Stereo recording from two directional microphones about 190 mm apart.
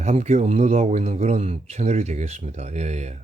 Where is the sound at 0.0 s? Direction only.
35° right (ahead or behind).